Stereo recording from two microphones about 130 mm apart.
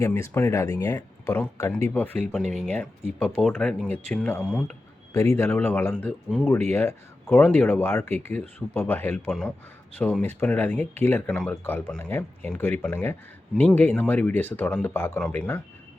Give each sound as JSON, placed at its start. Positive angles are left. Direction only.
{"t": 0.0, "sound": "speech", "side_deg": 20}
{"t": 2.4, "sound": "speech", "side_deg": -60}
{"t": 2.7, "sound": "speech", "side_deg": 15}
{"t": 5.1, "sound": "speech", "side_deg": 25}